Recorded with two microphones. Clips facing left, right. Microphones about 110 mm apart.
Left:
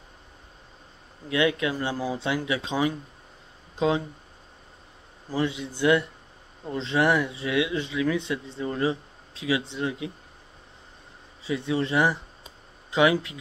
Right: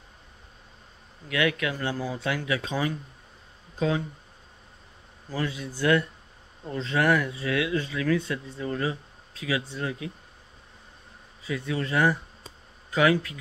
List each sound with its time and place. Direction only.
1.3 s speech: 25° left (ahead or behind)
5.3 s speech: 25° left (ahead or behind)
11.4 s speech: 25° left (ahead or behind)